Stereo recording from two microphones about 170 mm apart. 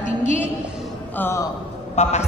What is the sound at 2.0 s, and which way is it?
Speech, 40° left (ahead or behind).